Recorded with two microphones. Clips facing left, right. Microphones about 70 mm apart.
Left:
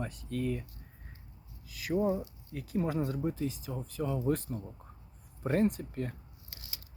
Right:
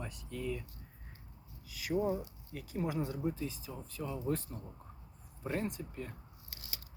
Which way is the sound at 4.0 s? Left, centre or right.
Left.